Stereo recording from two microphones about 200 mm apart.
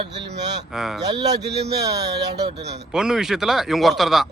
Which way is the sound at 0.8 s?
Centre (ahead or behind).